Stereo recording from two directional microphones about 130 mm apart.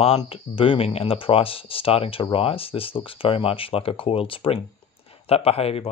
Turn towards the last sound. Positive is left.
turn(degrees=50)  # may be behind; listen again after turning